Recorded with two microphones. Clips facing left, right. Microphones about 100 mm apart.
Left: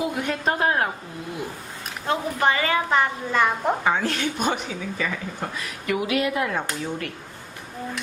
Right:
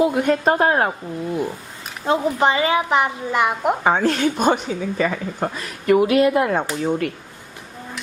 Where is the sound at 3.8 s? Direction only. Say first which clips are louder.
Right 6 dB; 35° right (ahead or behind).